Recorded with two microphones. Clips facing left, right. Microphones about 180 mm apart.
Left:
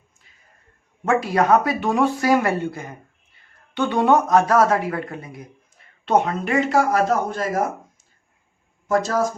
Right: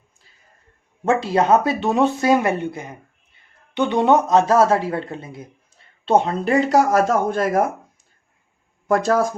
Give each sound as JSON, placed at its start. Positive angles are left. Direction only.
{"t": 1.0, "sound": "speech", "side_deg": -25}
{"t": 8.9, "sound": "speech", "side_deg": -55}